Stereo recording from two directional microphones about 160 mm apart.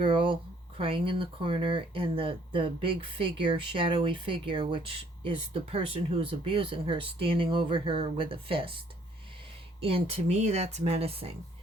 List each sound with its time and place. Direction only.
0.0 s a sound: 30° right (ahead or behind)
0.8 s speech: 35° right (ahead or behind)
9.8 s speech: 35° right (ahead or behind)